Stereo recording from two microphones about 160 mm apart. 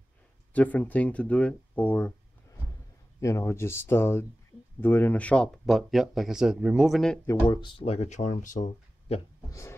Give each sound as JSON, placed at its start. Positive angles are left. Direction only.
{"t": 0.5, "sound": "speech", "side_deg": 10}
{"t": 3.2, "sound": "speech", "side_deg": 20}
{"t": 7.4, "sound": "speech", "side_deg": 30}
{"t": 9.5, "sound": "a sound", "side_deg": 15}